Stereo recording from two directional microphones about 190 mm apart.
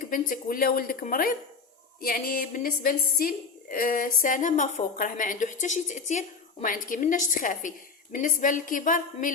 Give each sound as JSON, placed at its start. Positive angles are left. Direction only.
{"t": 0.0, "sound": "a woman's voice", "side_deg": 45}